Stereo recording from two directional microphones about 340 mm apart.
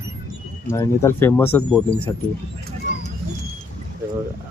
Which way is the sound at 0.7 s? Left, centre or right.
Centre.